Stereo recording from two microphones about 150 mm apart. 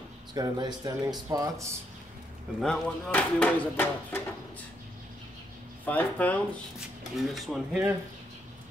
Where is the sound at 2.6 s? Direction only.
10° left (ahead or behind).